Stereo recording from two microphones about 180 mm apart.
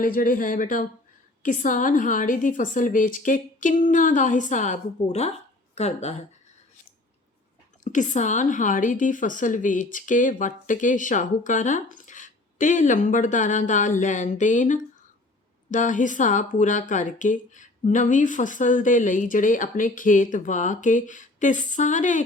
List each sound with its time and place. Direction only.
0.0 s a woman's voice: 50° left (ahead or behind)
7.9 s a woman's voice: 45° left (ahead or behind)